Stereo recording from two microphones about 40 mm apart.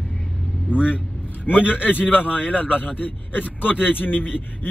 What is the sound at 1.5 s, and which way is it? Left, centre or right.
Speech, left.